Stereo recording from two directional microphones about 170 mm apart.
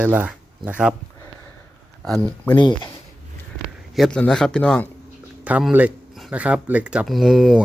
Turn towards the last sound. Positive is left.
turn(degrees=0)  # may be behind; listen again after turning